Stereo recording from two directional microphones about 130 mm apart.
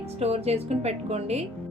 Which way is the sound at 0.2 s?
55° right (ahead or behind).